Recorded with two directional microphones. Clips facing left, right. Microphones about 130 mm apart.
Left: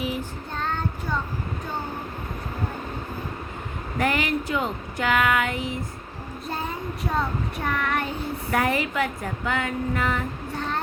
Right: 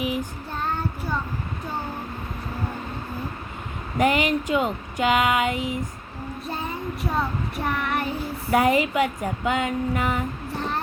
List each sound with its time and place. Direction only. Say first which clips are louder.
0.0 s child singing: right 2 dB; 15° right (ahead or behind)
3.9 s speech: right 3 dB; 15° right (ahead or behind)
7.0 s child singing: even; 5° right (ahead or behind)
8.5 s speech: right 5 dB; 15° right (ahead or behind)